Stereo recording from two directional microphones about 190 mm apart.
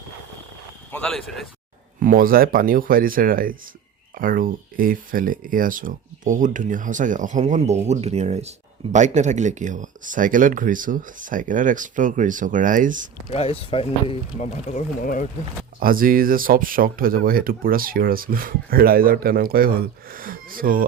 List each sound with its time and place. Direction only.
0.9 s speech: 5° left (ahead or behind)
2.0 s speech: 45° right (ahead or behind)
13.3 s speech: 30° left (ahead or behind)
15.8 s speech: 50° right (ahead or behind)